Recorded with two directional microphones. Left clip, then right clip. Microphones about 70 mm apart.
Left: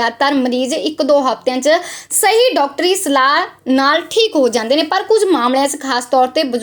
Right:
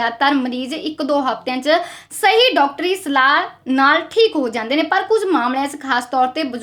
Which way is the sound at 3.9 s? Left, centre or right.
Left.